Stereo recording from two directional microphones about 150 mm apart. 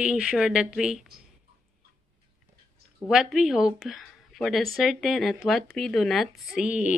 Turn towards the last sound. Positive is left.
turn(degrees=-10)  # may be behind; listen again after turning